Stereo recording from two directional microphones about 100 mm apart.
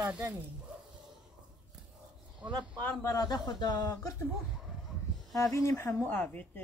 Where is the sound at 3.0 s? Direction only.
40° left (ahead or behind).